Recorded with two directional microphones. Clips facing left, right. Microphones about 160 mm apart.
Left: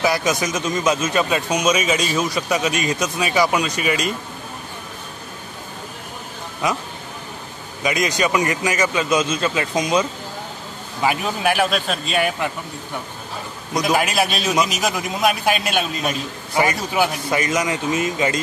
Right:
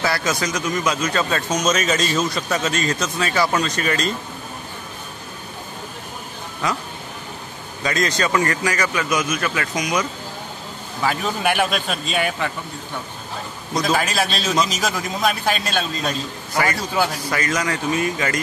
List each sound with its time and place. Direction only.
0.0 s a man's voice: 15° left (ahead or behind)
6.6 s a man's voice: 20° left (ahead or behind)
7.8 s a man's voice: 15° left (ahead or behind)
11.4 s a man's voice: centre (ahead or behind)
13.7 s a man's voice: 15° left (ahead or behind)